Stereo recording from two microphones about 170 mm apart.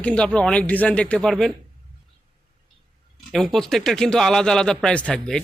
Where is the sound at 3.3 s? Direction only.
Centre (ahead or behind).